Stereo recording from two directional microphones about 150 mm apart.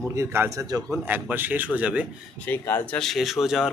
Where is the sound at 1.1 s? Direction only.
10° right (ahead or behind).